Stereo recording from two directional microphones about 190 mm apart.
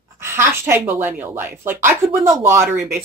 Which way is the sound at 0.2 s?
15° right (ahead or behind).